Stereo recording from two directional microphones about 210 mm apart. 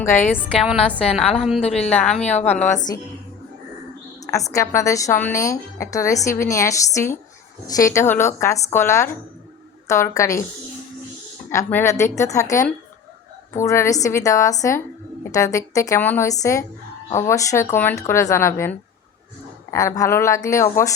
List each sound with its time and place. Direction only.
0.6 s a woman's voice: centre (ahead or behind)
1.6 s a woman's voice: 30° left (ahead or behind)
1.9 s speech: 5° left (ahead or behind)
2.4 s a woman's voice: 35° left (ahead or behind)
4.3 s speech: 15° left (ahead or behind)
11.5 s speech: 10° left (ahead or behind)